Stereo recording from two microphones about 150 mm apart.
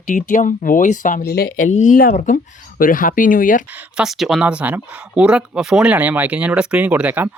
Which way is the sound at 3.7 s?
10° right (ahead or behind).